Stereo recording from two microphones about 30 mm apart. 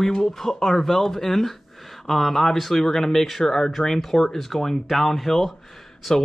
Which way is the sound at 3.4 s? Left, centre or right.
Centre.